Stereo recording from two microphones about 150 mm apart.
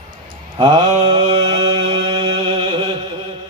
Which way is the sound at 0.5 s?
30° right (ahead or behind).